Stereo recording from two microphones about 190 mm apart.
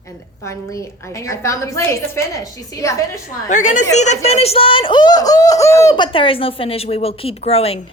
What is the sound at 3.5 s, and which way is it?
Speech, 40° left (ahead or behind).